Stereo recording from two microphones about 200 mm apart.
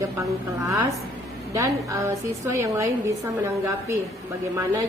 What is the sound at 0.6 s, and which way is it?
A woman's voice, 20° right (ahead or behind).